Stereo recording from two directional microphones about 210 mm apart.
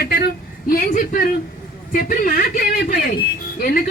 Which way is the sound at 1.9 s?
40° left (ahead or behind).